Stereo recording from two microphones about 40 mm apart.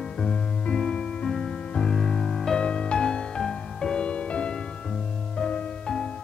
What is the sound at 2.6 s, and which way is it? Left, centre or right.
Music, left.